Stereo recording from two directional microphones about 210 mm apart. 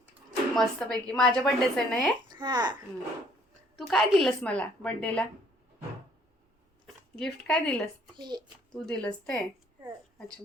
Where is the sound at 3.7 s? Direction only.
Centre (ahead or behind).